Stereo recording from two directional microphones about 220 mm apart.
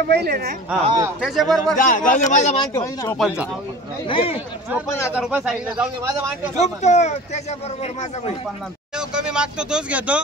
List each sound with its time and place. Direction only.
0.1 s speech: 45° right (ahead or behind)
0.8 s speech: 15° right (ahead or behind)
1.2 s speech: centre (ahead or behind)
1.8 s speech: 35° left (ahead or behind)
2.6 s speech: 15° left (ahead or behind)
3.2 s speech: 5° right (ahead or behind)
4.1 s speech: 25° left (ahead or behind)
5.1 s speech: 5° right (ahead or behind)
6.5 s speech: 30° left (ahead or behind)
8.9 s speech: 5° right (ahead or behind)